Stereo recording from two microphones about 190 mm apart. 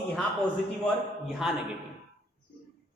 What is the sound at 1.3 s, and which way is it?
Speech, centre (ahead or behind).